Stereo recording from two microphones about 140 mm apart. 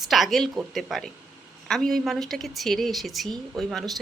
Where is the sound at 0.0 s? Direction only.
Centre (ahead or behind).